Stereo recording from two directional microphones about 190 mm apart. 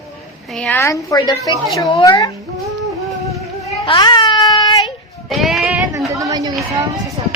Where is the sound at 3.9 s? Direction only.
25° left (ahead or behind).